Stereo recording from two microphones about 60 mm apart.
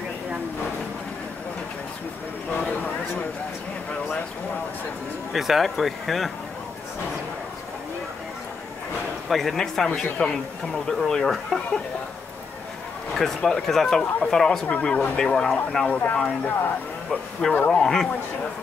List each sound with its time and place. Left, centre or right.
2.6 s a sound: centre
5.3 s speech: centre
9.3 s speech: centre
13.1 s speech: centre
16.4 s speech: left
17.1 s speech: centre